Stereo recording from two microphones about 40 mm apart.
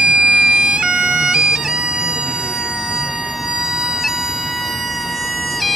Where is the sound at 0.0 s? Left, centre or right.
Right.